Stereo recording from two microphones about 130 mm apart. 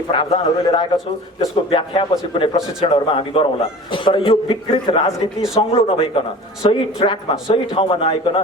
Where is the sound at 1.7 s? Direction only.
45° left (ahead or behind).